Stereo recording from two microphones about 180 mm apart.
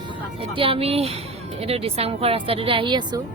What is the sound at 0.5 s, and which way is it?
Speech, 30° right (ahead or behind).